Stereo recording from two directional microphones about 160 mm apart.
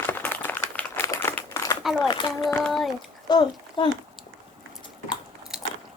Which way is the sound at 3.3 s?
25° left (ahead or behind).